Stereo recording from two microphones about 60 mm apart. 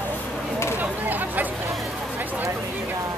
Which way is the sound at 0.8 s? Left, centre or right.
Right.